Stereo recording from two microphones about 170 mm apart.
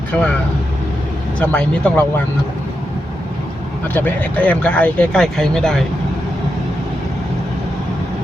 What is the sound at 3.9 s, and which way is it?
Speech, 10° left (ahead or behind).